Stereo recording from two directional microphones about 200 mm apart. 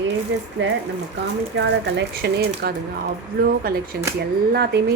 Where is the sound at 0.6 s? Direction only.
65° right (ahead or behind).